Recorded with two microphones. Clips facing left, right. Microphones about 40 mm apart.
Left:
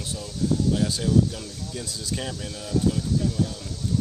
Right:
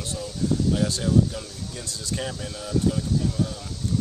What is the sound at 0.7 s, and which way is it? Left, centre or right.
Speech, centre.